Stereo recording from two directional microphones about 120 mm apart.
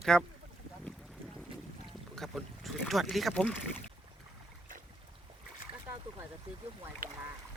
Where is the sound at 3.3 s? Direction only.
10° left (ahead or behind).